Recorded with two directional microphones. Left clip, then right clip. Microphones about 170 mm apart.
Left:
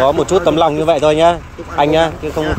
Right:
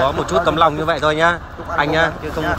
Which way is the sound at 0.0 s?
50° left (ahead or behind).